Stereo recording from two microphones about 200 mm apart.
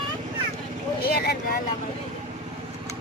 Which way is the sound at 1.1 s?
50° left (ahead or behind).